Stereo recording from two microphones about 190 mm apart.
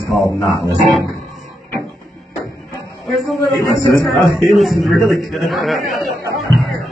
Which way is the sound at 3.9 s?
15° left (ahead or behind).